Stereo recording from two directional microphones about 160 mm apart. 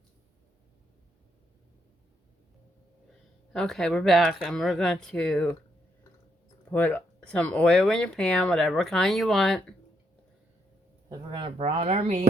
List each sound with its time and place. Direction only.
3.5 s speech: 5° left (ahead or behind)
6.7 s speech: 10° left (ahead or behind)
11.1 s speech: 30° right (ahead or behind)